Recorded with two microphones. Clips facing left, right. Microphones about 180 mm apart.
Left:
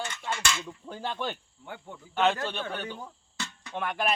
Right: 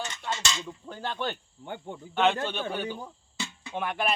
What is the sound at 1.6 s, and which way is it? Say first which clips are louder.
Speech: right 5 dB; 25° right (ahead or behind).